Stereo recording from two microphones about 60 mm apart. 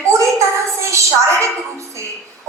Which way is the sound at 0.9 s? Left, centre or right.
Right.